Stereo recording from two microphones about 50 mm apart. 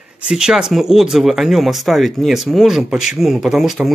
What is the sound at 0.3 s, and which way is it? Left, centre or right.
Speech, centre.